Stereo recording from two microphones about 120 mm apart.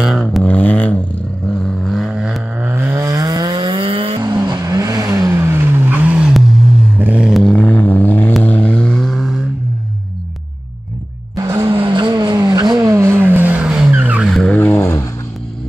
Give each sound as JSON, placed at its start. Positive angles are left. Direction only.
{"t": 0.2, "sound": "a sound", "side_deg": 10}
{"t": 1.5, "sound": "vehicle", "side_deg": 5}
{"t": 2.6, "sound": "vehicle", "side_deg": -15}
{"t": 4.2, "sound": "vehicle", "side_deg": -35}
{"t": 7.0, "sound": "a sound", "side_deg": -10}
{"t": 8.4, "sound": "vehicle", "side_deg": 10}
{"t": 11.3, "sound": "music", "side_deg": -25}
{"t": 11.7, "sound": "vehicle", "side_deg": -45}
{"t": 14.3, "sound": "vehicle", "side_deg": 10}